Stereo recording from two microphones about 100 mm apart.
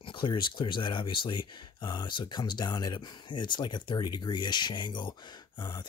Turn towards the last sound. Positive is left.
turn(degrees=50)  # may be behind; listen again after turning